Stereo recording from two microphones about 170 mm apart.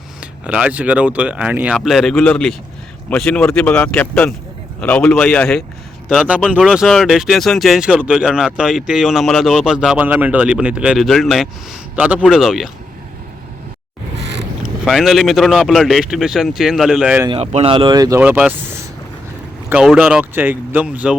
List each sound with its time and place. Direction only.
0.2 s speech: 5° right (ahead or behind)
14.2 s vehicle: 90° right
14.8 s speech: centre (ahead or behind)
17.2 s speech: 35° right (ahead or behind)
18.2 s speech: 10° right (ahead or behind)
19.7 s speech: 5° right (ahead or behind)